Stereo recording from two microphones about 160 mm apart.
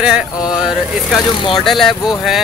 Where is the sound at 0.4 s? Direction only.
25° left (ahead or behind).